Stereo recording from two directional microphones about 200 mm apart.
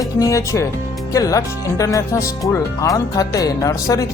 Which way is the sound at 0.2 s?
15° left (ahead or behind).